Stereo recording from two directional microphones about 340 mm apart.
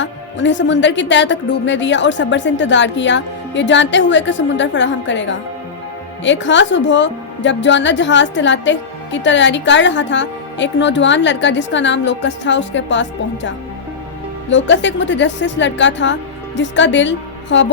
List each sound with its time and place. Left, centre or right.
0.0 s a woman's voice: left
14.5 s a woman's voice: left